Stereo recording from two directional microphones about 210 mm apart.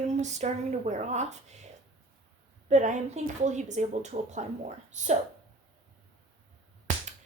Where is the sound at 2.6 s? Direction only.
35° right (ahead or behind).